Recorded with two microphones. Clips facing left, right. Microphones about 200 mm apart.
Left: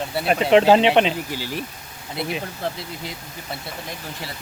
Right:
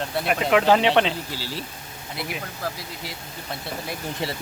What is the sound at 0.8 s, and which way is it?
Speech, 15° left (ahead or behind).